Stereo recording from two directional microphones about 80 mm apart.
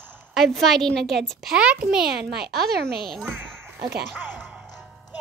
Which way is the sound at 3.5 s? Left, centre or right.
Right.